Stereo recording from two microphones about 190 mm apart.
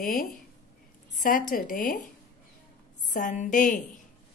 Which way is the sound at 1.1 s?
45° left (ahead or behind).